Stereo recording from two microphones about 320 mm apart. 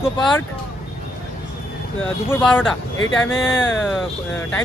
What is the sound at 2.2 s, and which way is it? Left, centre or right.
Speech, centre.